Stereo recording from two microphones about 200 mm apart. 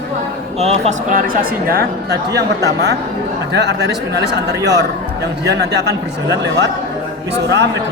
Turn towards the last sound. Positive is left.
turn(degrees=-60)  # may be behind; listen again after turning